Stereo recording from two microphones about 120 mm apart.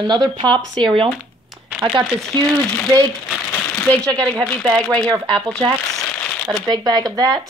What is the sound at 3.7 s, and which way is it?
Speech, 10° left (ahead or behind).